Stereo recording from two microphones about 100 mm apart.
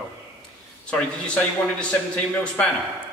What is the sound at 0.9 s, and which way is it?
Speech, 10° left (ahead or behind).